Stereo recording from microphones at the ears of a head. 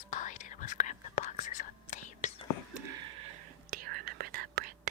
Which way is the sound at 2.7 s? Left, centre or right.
Right.